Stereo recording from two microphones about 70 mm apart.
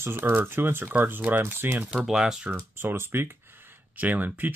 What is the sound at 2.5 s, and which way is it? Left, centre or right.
Speech, right.